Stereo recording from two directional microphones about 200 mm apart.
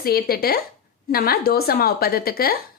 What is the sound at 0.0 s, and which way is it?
A woman's voice, 50° left (ahead or behind).